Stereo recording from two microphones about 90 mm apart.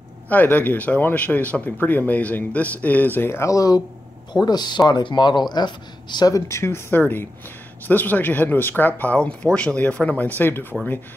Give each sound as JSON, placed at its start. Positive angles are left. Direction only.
{"t": 0.3, "sound": "speech", "side_deg": 20}
{"t": 6.3, "sound": "speech", "side_deg": 30}